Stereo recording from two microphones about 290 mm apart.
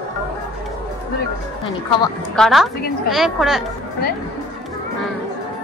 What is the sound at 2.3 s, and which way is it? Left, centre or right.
A woman's voice, centre.